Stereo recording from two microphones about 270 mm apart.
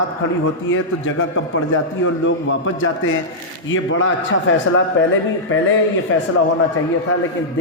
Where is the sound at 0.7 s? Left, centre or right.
Left.